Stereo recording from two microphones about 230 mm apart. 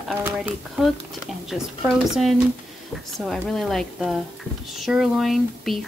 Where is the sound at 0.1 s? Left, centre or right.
Centre.